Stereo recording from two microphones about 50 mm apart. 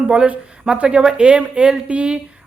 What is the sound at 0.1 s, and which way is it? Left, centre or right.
Speech, right.